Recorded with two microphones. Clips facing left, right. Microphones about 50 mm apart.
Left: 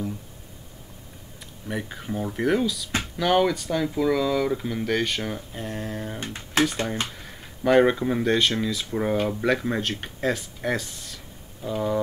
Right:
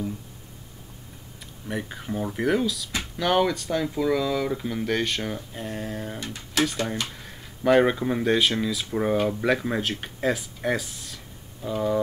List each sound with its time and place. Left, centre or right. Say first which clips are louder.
1.4 s speech: even; centre
6.1 s speech: left 3 dB; left
7.1 s speech: left 1 dB; centre